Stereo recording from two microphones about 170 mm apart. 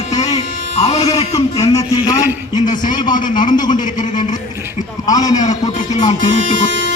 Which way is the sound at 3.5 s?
25° left (ahead or behind).